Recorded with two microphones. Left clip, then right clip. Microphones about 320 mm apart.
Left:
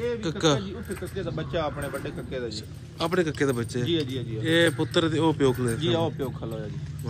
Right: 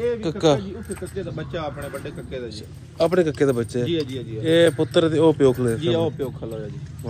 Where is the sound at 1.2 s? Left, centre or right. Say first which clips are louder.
Left 1 dB; left.